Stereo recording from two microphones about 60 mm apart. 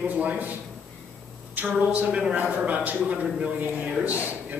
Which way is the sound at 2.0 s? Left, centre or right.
Centre.